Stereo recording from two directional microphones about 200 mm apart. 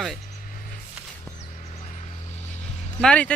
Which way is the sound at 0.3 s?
40° left (ahead or behind).